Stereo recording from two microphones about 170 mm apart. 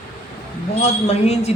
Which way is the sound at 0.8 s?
40° left (ahead or behind).